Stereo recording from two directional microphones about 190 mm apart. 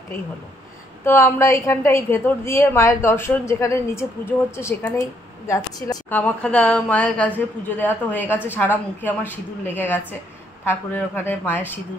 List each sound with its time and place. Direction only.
1.0 s a woman's voice: 15° left (ahead or behind)
6.1 s a woman's voice: 5° left (ahead or behind)